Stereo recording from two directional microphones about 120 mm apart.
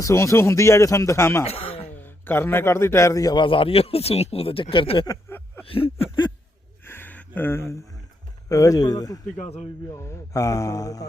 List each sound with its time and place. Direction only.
0.0 s speech: 25° left (ahead or behind)
1.5 s speech: 50° left (ahead or behind)
2.0 s a man's voice: 15° left (ahead or behind)
3.4 s speech: 45° left (ahead or behind)
6.8 s a sound: 20° left (ahead or behind)
8.4 s a man's voice: 30° left (ahead or behind)
9.4 s speech: 60° left (ahead or behind)
9.9 s speech: 25° left (ahead or behind)